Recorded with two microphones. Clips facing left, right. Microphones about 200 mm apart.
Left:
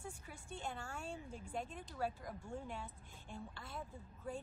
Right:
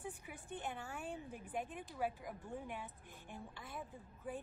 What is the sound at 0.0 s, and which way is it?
A woman's voice, 20° right (ahead or behind).